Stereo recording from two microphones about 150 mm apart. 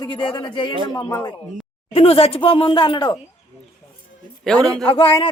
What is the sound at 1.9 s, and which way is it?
Speech, 40° left (ahead or behind).